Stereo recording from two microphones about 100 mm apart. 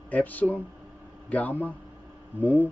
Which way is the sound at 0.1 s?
15° left (ahead or behind).